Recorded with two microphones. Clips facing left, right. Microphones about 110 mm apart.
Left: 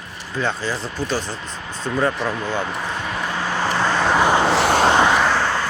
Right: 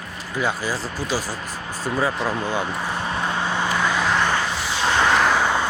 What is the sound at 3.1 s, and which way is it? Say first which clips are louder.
Vehicle: right 1 dB; 25° right (ahead or behind).